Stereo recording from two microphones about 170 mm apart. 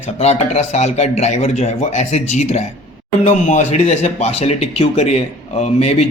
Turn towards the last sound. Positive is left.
turn(degrees=40)  # may be behind; listen again after turning